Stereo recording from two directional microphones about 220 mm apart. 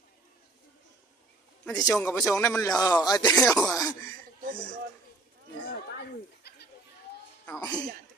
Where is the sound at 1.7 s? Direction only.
15° left (ahead or behind).